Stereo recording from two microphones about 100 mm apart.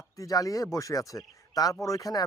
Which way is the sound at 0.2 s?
35° left (ahead or behind).